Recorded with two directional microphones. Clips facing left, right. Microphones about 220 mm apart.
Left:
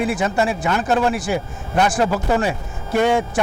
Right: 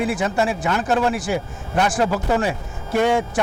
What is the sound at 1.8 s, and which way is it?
Speech, 5° left (ahead or behind).